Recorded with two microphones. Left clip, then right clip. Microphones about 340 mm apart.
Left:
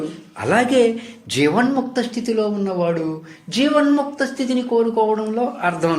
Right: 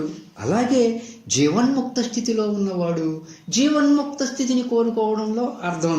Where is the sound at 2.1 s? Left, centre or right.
Left.